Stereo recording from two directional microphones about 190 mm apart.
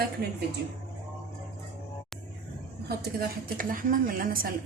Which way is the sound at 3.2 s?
50° right (ahead or behind).